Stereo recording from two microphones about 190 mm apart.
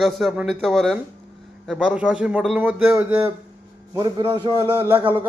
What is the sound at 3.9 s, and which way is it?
Speech, 20° right (ahead or behind).